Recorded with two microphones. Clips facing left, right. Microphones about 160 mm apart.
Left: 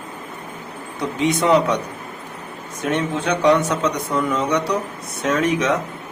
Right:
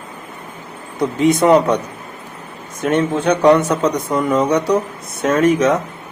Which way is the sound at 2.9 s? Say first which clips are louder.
Right 6 dB; 50° right (ahead or behind).